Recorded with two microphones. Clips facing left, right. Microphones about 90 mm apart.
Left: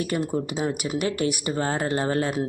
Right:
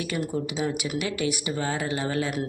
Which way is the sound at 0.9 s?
45° left (ahead or behind).